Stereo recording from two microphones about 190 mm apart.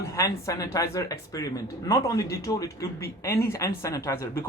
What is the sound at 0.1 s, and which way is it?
Speech, 15° left (ahead or behind).